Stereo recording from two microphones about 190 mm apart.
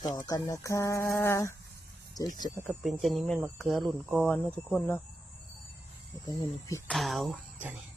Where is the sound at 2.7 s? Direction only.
Centre (ahead or behind).